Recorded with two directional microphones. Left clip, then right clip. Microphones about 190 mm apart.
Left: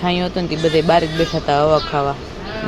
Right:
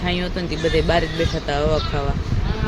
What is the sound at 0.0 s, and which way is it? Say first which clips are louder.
Speech: left 5 dB; 10° left (ahead or behind).